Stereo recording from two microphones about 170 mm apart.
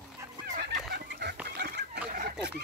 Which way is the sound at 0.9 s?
75° right (ahead or behind).